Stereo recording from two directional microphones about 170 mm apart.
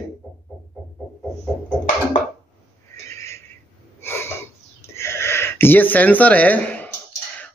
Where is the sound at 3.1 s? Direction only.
15° left (ahead or behind).